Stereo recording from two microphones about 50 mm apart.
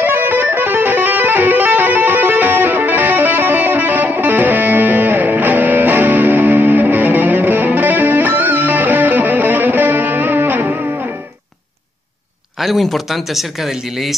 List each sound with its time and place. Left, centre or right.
0.0 s music: right
12.5 s a sound: centre
12.8 s speech: centre